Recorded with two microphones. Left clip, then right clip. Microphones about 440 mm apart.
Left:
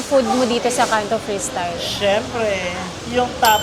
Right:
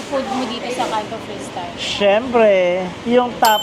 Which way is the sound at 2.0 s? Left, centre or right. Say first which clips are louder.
Right 6 dB; right.